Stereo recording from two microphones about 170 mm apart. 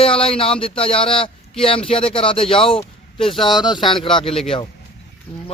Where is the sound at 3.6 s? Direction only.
25° left (ahead or behind).